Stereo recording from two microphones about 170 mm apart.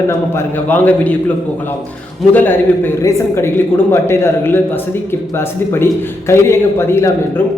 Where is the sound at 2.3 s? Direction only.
10° left (ahead or behind).